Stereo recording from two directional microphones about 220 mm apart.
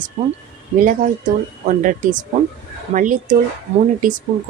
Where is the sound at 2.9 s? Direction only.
35° right (ahead or behind).